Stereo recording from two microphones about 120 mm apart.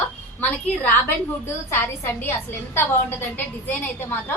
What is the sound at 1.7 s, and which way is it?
A woman's voice, 20° left (ahead or behind).